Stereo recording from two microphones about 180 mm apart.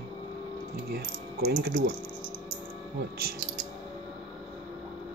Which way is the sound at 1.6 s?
75° right (ahead or behind).